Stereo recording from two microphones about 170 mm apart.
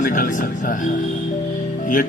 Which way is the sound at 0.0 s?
50° left (ahead or behind).